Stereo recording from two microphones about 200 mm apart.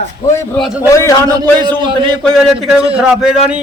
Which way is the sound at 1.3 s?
20° right (ahead or behind).